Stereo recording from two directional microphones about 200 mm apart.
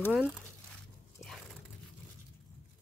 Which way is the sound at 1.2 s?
Centre (ahead or behind).